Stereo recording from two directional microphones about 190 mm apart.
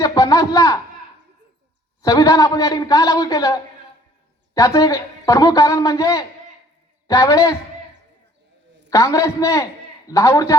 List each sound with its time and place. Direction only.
0.0 s a sound: 20° left (ahead or behind)
2.0 s a man's voice: 20° left (ahead or behind)
8.9 s a man's voice: 15° left (ahead or behind)